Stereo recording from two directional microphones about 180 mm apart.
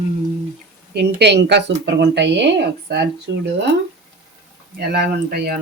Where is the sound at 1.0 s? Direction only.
65° right (ahead or behind).